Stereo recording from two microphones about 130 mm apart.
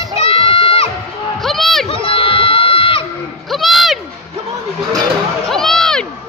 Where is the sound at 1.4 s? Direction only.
Centre (ahead or behind).